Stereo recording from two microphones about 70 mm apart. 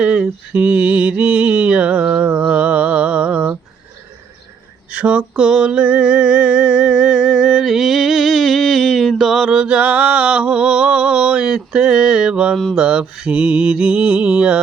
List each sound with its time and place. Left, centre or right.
0.0 s mantra: centre
4.9 s a sound: centre
12.7 s mantra: centre